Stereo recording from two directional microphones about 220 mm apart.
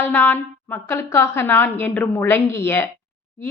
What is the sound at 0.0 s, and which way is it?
A woman's voice, 10° left (ahead or behind).